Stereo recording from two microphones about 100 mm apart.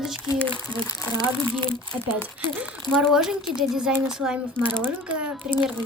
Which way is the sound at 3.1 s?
5° right (ahead or behind).